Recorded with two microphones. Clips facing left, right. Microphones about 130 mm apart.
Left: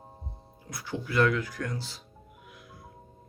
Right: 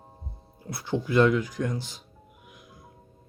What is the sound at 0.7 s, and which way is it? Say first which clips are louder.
Speech: right 7 dB; 30° right (ahead or behind).